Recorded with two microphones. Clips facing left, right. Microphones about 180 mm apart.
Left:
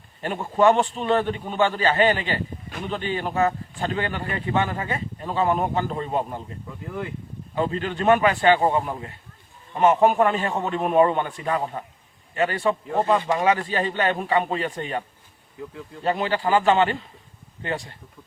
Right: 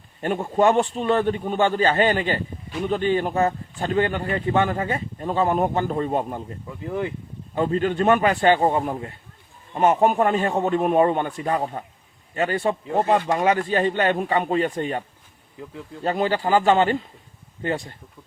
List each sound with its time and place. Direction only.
0.2 s speech: 50° right (ahead or behind)
7.5 s speech: 45° right (ahead or behind)
9.8 s speech: 45° right (ahead or behind)
16.0 s speech: 40° right (ahead or behind)